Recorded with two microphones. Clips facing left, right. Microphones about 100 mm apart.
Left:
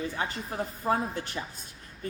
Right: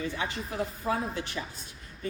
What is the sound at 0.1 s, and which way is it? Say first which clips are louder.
A woman's voice: even; 40° left (ahead or behind).